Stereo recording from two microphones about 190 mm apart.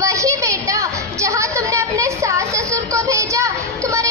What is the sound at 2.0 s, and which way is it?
Music, 15° right (ahead or behind).